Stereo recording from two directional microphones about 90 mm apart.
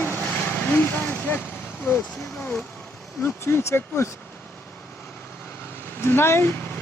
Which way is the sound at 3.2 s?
30° left (ahead or behind).